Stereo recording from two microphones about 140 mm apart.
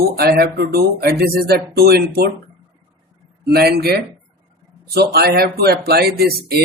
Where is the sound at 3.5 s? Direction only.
90° right.